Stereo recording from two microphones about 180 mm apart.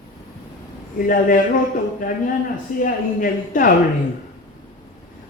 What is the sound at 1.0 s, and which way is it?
Speech, 50° left (ahead or behind).